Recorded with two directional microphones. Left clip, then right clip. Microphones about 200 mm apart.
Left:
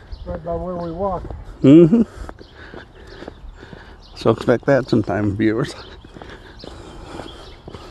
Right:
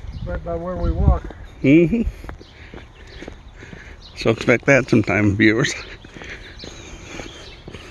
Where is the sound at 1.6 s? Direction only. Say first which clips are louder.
Left 4 dB; 40° left (ahead or behind).